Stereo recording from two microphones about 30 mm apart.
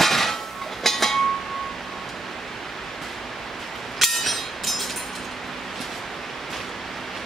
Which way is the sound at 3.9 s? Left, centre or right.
Centre.